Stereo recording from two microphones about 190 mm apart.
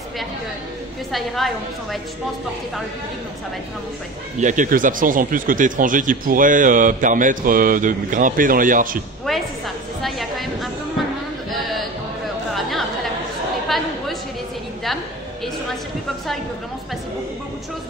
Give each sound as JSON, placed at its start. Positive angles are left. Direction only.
{"t": 1.1, "sound": "a woman's voice", "side_deg": 0}
{"t": 4.4, "sound": "speech", "side_deg": -40}
{"t": 9.3, "sound": "a sound", "side_deg": 0}
{"t": 12.5, "sound": "chatter", "side_deg": 0}